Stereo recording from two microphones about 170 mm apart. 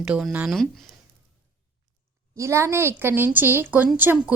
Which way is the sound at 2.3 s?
15° right (ahead or behind).